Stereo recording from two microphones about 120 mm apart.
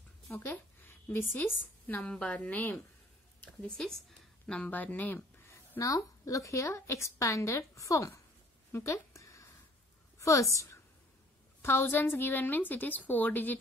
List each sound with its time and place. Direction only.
0.3 s a woman's voice: 20° left (ahead or behind)
8.7 s a sound: 25° left (ahead or behind)
10.5 s a woman's voice: 25° left (ahead or behind)